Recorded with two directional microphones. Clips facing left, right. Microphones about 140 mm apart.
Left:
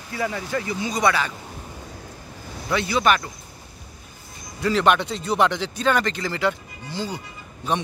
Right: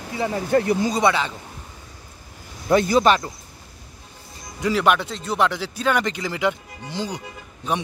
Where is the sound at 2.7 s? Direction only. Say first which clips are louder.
Right 6 dB; 45° right (ahead or behind).